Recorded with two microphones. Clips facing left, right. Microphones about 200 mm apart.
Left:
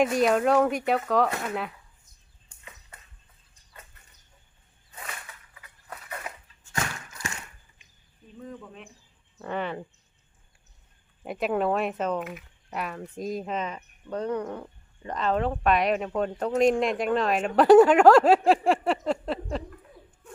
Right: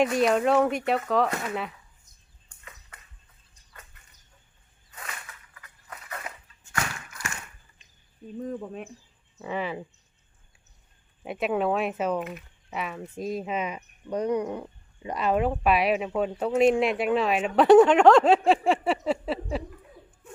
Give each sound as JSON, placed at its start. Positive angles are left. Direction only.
{"t": 0.0, "sound": "speech", "side_deg": 0}
{"t": 6.7, "sound": "a sound", "side_deg": 20}
{"t": 8.4, "sound": "speech", "side_deg": -40}
{"t": 9.4, "sound": "speech", "side_deg": -5}
{"t": 11.2, "sound": "speech", "side_deg": 0}